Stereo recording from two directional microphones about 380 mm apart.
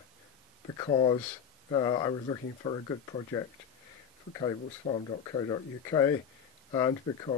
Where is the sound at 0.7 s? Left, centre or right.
Centre.